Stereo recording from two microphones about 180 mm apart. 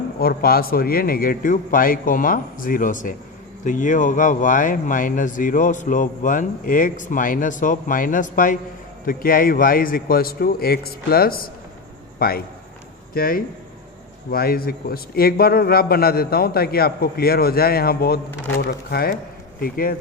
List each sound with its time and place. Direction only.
0.2 s a man's voice: 55° left (ahead or behind)